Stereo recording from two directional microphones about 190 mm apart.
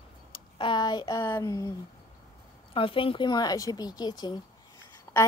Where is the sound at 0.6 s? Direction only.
25° left (ahead or behind).